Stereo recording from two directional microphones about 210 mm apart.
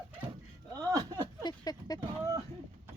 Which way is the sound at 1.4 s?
20° left (ahead or behind).